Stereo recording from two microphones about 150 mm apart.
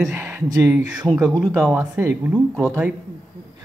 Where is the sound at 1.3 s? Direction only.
Centre (ahead or behind).